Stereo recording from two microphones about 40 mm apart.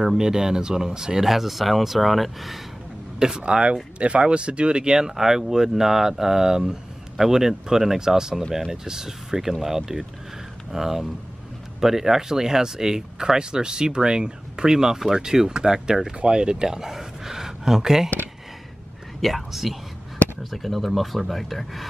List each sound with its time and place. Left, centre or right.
0.0 s speech: centre
3.2 s speech: centre
19.2 s speech: centre